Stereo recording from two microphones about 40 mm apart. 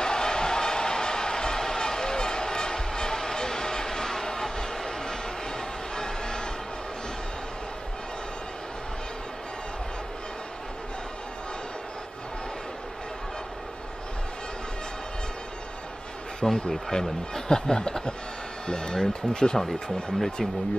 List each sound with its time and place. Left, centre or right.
0.0 s a sound: centre
5.9 s music: centre
16.4 s speech: centre